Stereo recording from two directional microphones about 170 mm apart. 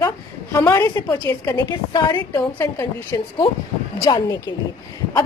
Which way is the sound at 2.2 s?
15° left (ahead or behind).